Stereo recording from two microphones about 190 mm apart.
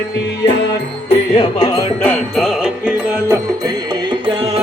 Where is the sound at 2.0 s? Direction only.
5° left (ahead or behind).